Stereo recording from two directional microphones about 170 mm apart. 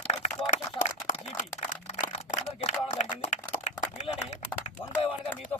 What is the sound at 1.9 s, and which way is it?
Camera, 45° left (ahead or behind).